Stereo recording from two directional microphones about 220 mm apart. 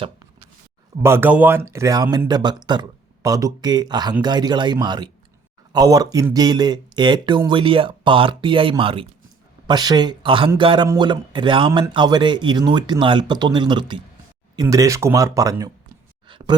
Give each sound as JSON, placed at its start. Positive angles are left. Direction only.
{"t": 1.0, "sound": "a man's voice", "side_deg": -10}